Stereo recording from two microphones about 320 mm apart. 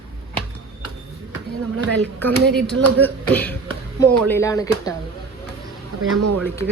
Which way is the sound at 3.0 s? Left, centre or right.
Centre.